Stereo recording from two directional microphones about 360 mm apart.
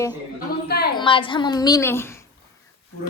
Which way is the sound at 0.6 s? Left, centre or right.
Left.